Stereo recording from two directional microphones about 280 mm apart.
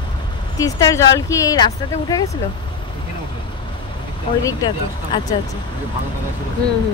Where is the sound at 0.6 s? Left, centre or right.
Centre.